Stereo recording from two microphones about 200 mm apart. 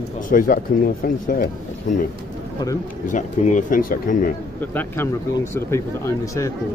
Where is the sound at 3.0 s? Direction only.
40° left (ahead or behind).